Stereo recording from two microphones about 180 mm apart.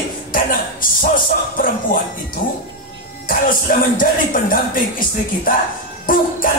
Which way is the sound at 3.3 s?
50° left (ahead or behind).